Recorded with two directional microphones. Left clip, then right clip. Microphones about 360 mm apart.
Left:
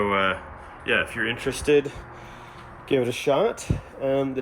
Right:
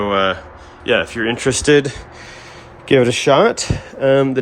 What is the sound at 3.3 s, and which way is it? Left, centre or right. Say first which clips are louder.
Speech: right 9 dB; right.